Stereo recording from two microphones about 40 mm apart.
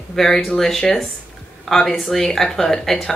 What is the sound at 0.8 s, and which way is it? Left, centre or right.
Speech, left.